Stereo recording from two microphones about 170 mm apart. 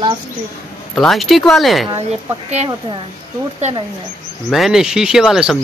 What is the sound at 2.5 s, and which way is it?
Speech, 40° right (ahead or behind).